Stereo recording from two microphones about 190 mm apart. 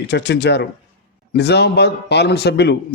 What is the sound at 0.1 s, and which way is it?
A man's voice, 60° left (ahead or behind).